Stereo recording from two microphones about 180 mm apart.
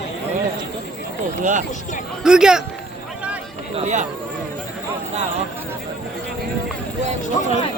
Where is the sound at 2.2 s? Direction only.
5° right (ahead or behind).